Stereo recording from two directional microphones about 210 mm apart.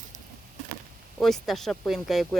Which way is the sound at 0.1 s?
35° right (ahead or behind).